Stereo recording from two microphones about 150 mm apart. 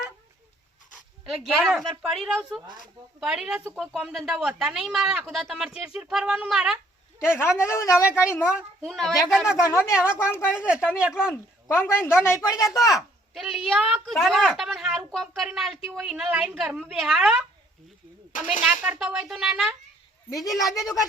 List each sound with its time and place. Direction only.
1.2 s speech: 5° right (ahead or behind)
7.2 s a woman's voice: 15° left (ahead or behind)
8.0 s a woman's voice: 10° right (ahead or behind)
9.6 s a woman's voice: 15° left (ahead or behind)
9.9 s a woman's voice: 5° right (ahead or behind)
10.2 s a woman's voice: 15° left (ahead or behind)
10.5 s a woman's voice: 5° right (ahead or behind)
11.9 s a woman's voice: 15° left (ahead or behind)
12.9 s speech: centre (ahead or behind)
18.6 s speech: 10° right (ahead or behind)